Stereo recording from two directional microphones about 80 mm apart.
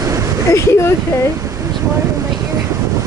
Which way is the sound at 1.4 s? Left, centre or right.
Right.